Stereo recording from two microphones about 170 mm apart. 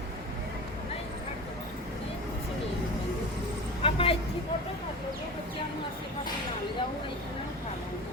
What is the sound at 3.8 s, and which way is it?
Vehicle, 35° left (ahead or behind).